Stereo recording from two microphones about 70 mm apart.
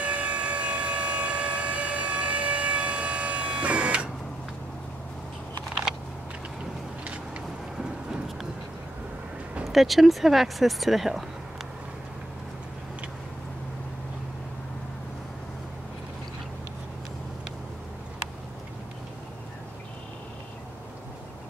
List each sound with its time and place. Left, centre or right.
0.0 s siren: centre
7.7 s vehicle: centre
9.7 s speech: centre